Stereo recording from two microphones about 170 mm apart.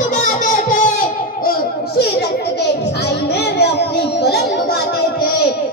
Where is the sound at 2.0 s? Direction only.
75° left (ahead or behind).